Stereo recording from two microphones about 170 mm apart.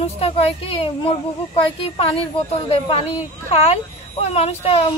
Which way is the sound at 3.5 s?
35° left (ahead or behind).